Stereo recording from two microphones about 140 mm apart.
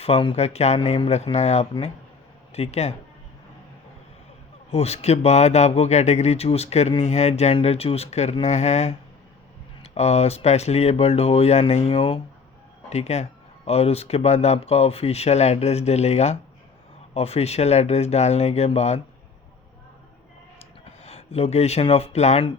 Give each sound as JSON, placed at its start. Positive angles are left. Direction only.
{"t": 0.0, "sound": "speech", "side_deg": 40}
{"t": 4.7, "sound": "speech", "side_deg": 50}
{"t": 12.9, "sound": "speech", "side_deg": 50}
{"t": 21.0, "sound": "speech", "side_deg": 50}